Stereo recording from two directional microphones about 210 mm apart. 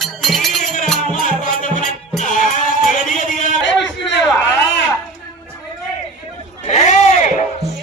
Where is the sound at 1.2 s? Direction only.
40° left (ahead or behind).